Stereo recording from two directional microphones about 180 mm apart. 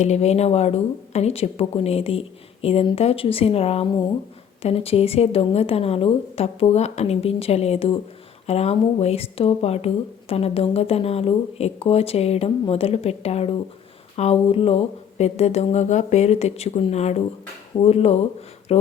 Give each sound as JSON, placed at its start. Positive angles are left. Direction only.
{"t": 0.0, "sound": "speech", "side_deg": 40}